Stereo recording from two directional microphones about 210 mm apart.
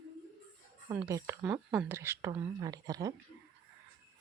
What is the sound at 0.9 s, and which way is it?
Speech, 15° right (ahead or behind).